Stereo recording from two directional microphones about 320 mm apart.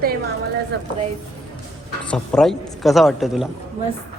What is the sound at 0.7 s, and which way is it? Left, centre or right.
Speech, right.